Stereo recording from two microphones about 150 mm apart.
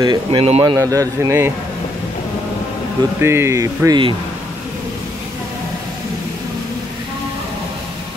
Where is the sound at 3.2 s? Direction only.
15° right (ahead or behind).